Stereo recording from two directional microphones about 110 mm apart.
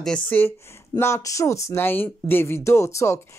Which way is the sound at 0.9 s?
25° left (ahead or behind).